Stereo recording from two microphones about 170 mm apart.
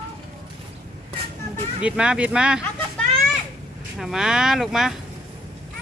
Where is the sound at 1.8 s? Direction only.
5° right (ahead or behind).